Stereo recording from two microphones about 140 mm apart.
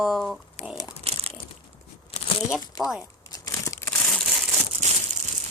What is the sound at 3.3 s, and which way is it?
Crumpling, 25° left (ahead or behind).